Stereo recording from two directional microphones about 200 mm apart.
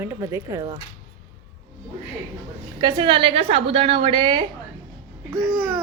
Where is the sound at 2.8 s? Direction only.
20° right (ahead or behind).